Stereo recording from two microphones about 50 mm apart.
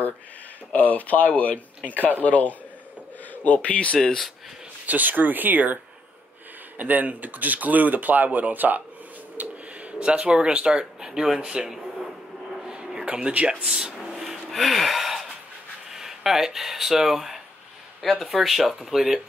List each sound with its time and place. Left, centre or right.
0.7 s speech: left
4.8 s speech: right
6.8 s speech: right; by 12.1 s centre
12.5 s a sound: centre
13.7 s a sound: centre
14.5 s gasp: centre
15.9 s speech: centre